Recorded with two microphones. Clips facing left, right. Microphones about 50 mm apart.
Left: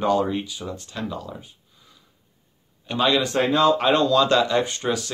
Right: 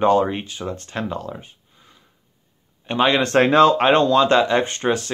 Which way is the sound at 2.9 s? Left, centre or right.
Right.